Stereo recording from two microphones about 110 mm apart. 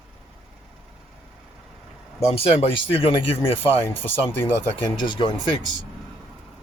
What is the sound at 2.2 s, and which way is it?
Speech, 65° left (ahead or behind).